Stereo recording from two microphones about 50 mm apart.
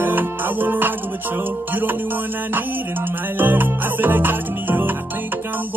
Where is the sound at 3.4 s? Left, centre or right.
Right.